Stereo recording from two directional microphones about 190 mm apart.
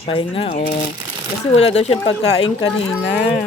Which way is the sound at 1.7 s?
35° left (ahead or behind).